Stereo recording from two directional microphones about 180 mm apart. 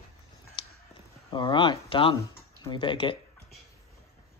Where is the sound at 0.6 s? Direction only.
25° left (ahead or behind).